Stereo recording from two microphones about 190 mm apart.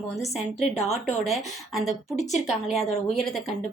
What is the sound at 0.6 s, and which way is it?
Speech, 35° left (ahead or behind).